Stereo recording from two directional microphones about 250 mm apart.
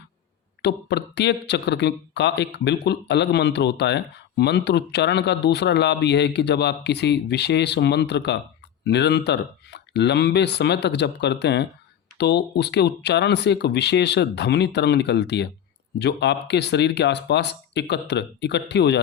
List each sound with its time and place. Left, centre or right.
0.6 s speech: left